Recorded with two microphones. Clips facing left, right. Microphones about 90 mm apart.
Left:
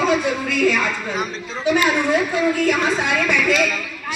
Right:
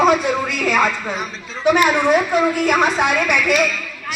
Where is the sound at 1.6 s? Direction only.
75° right (ahead or behind).